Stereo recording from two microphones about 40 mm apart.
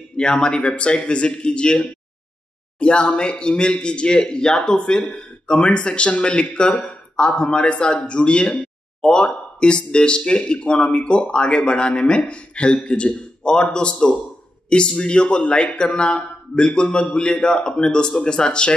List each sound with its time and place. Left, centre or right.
0.1 s a man's voice: left